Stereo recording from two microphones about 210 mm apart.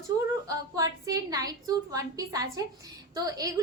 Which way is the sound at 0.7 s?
15° right (ahead or behind).